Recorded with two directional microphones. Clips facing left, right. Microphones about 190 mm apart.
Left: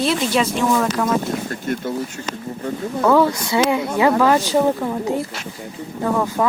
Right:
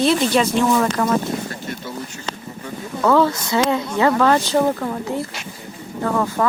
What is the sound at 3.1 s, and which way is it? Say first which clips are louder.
Speech: even; 15° left (ahead or behind).